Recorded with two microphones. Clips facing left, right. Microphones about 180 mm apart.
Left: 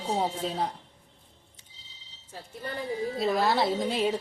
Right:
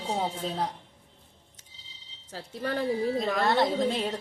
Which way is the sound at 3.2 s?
Centre (ahead or behind).